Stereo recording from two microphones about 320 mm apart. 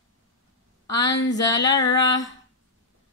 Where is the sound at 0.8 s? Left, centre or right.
Centre.